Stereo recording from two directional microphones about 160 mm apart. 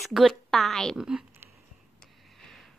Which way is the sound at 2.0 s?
Centre (ahead or behind).